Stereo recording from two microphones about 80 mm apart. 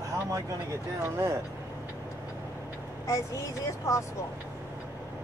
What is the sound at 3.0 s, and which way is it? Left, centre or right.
Speech, left.